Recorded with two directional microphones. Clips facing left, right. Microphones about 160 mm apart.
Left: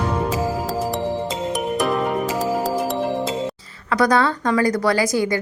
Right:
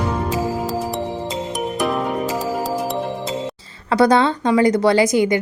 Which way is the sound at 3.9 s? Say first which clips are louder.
Right 3 dB; 25° right (ahead or behind).